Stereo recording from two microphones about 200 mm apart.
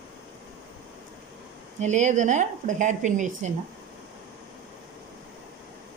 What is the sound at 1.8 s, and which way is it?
Speech, 35° right (ahead or behind).